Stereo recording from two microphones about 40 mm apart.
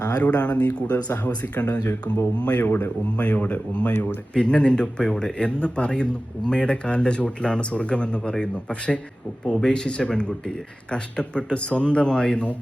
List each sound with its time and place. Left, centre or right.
0.2 s speech: left
2.6 s speech: left
3.2 s speech: left
4.4 s speech: left